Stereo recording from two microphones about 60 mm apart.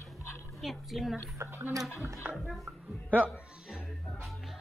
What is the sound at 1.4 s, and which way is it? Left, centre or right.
Speech, right.